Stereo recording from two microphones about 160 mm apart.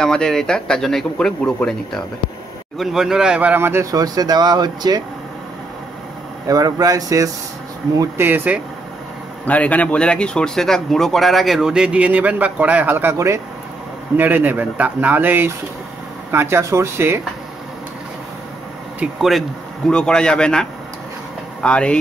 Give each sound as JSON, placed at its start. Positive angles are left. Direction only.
{"t": 0.0, "sound": "speech", "side_deg": 5}
{"t": 6.4, "sound": "speech", "side_deg": -20}
{"t": 9.5, "sound": "speech", "side_deg": 10}
{"t": 18.9, "sound": "speech", "side_deg": 0}
{"t": 21.6, "sound": "speech", "side_deg": 5}